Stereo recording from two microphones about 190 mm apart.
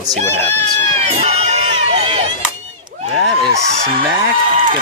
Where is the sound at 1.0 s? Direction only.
35° right (ahead or behind).